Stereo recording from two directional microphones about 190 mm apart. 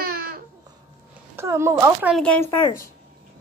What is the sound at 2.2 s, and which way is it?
Speech, 10° left (ahead or behind).